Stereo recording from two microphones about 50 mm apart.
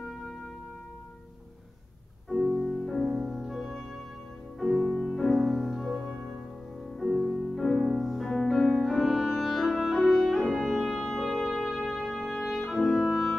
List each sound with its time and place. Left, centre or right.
2.2 s music: centre
12.7 s clarinet: centre